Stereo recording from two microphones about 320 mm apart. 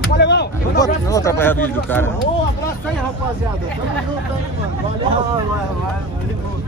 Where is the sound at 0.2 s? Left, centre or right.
Left.